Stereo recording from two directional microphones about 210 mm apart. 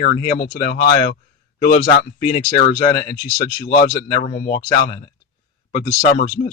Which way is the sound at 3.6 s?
50° left (ahead or behind).